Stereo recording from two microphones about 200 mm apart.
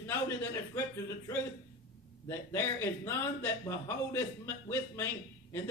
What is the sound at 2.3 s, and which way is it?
A man's voice, 10° left (ahead or behind).